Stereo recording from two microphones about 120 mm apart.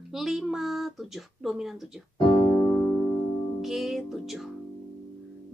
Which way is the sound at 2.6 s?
15° left (ahead or behind).